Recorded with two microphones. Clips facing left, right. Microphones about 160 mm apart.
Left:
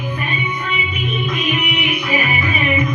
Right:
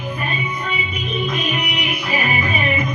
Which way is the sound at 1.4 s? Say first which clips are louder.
Left 3 dB; 35° right (ahead or behind).